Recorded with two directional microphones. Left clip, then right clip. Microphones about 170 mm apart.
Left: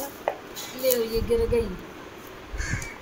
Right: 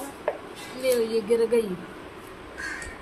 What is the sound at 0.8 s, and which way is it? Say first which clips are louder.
Speech: right 1 dB; 10° right (ahead or behind).